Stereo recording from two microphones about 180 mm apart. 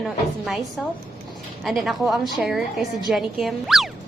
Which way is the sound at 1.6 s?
Centre (ahead or behind).